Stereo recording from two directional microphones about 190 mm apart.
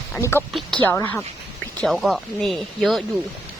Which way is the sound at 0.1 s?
10° left (ahead or behind).